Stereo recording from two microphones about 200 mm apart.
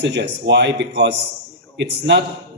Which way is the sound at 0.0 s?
60° right (ahead or behind).